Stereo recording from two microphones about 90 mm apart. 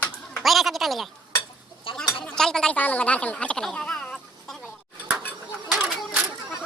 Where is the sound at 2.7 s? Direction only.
20° left (ahead or behind).